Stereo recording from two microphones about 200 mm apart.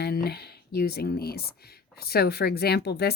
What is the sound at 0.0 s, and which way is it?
Speech, 55° left (ahead or behind).